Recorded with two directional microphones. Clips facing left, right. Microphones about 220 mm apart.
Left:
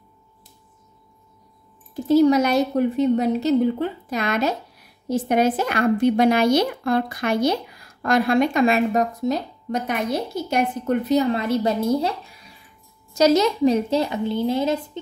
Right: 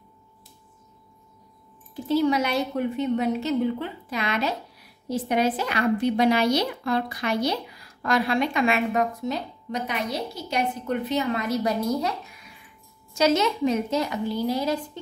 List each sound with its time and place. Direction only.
2.0 s a woman's voice: 40° left (ahead or behind); by 14.8 s 25° left (ahead or behind)